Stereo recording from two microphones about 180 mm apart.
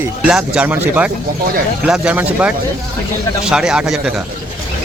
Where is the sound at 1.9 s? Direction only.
5° right (ahead or behind).